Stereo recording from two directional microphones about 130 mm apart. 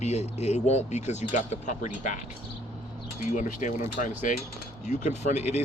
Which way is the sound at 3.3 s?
70° left (ahead or behind).